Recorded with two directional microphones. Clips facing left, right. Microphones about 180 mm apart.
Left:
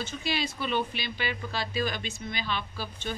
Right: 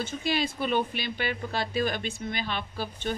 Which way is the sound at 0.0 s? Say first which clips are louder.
Right 3 dB; 50° right (ahead or behind).